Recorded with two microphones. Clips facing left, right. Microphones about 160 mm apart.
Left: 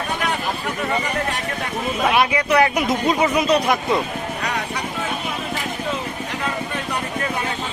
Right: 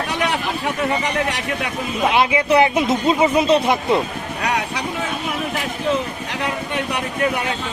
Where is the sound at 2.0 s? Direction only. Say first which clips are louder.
Right 2 dB; 25° right (ahead or behind).